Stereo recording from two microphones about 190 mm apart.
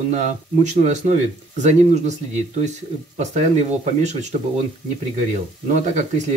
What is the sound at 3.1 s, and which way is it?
Speech, 35° right (ahead or behind).